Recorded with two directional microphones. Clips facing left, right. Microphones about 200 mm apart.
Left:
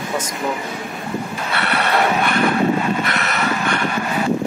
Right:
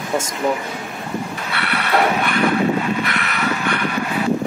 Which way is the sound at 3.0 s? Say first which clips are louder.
Left 1 dB; 45° left (ahead or behind).